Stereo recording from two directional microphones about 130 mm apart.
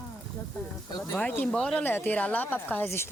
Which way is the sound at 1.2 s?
10° left (ahead or behind).